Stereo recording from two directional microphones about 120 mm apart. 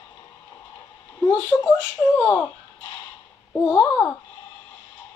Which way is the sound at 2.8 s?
40° left (ahead or behind).